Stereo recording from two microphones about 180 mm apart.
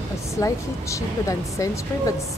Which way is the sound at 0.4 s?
15° left (ahead or behind).